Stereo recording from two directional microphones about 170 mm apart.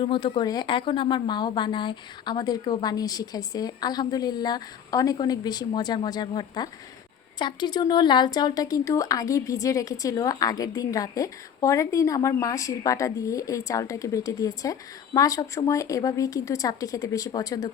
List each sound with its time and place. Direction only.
0.0 s a woman's voice: 30° left (ahead or behind)